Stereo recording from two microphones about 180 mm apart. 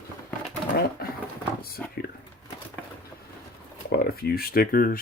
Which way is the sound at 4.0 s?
55° left (ahead or behind).